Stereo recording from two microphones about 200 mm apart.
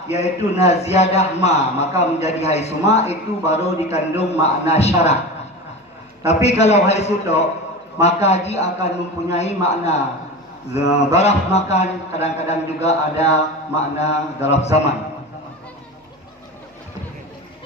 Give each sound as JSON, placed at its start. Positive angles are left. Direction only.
{"t": 0.1, "sound": "a man's voice", "side_deg": 35}
{"t": 6.2, "sound": "a man's voice", "side_deg": 30}